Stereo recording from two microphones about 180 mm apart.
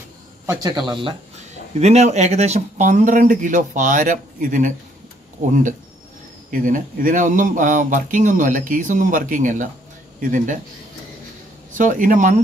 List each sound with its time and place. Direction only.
0.5 s speech: 20° right (ahead or behind)
1.3 s speech: 40° right (ahead or behind)
11.7 s speech: 45° right (ahead or behind)